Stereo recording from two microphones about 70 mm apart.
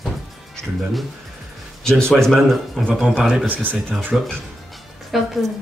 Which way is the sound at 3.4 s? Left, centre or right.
Right.